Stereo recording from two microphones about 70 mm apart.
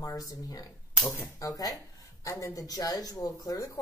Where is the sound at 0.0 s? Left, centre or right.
Left.